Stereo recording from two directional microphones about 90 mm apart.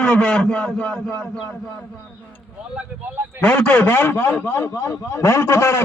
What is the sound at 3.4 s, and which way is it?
A man's voice, 15° left (ahead or behind).